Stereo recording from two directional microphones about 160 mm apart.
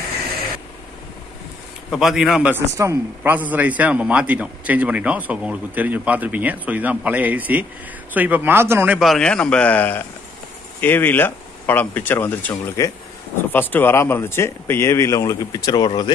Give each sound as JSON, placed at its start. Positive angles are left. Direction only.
{"t": 1.9, "sound": "a man's voice", "side_deg": -5}